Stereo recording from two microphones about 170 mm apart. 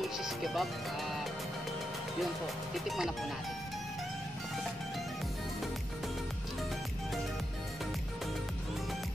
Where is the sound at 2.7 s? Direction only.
Centre (ahead or behind).